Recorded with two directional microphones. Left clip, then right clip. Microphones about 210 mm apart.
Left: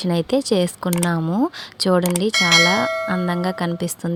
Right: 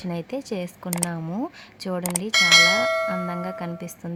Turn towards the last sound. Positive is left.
turn(degrees=25)  # may be behind; listen again after turning